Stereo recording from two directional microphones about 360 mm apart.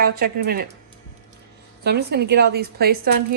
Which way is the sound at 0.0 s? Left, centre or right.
Right.